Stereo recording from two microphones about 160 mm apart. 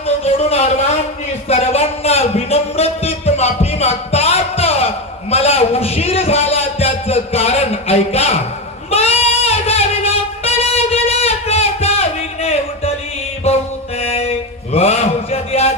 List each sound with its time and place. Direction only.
0.0 s a sound: 40° left (ahead or behind)
8.9 s music: 40° left (ahead or behind)
14.0 s mantra: 35° left (ahead or behind)